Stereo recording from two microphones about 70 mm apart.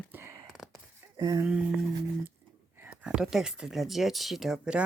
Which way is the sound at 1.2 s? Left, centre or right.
Right.